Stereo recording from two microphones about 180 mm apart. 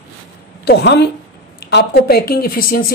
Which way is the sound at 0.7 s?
70° left (ahead or behind).